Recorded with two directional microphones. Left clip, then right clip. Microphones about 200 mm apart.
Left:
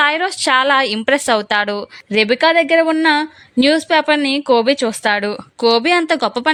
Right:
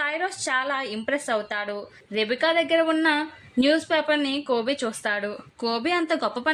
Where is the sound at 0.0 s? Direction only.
55° left (ahead or behind).